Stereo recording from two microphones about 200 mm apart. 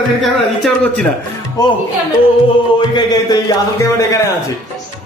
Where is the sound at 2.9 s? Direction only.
20° left (ahead or behind).